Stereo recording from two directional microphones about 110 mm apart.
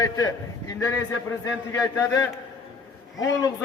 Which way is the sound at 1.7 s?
30° left (ahead or behind).